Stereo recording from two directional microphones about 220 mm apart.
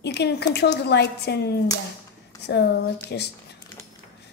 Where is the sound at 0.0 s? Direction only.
50° left (ahead or behind).